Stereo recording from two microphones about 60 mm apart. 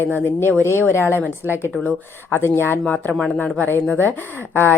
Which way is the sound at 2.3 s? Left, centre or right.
Left.